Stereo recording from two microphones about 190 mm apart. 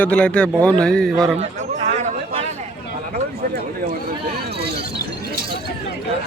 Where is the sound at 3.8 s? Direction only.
50° right (ahead or behind).